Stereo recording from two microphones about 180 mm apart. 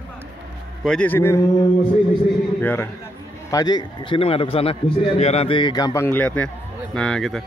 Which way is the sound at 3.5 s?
20° left (ahead or behind).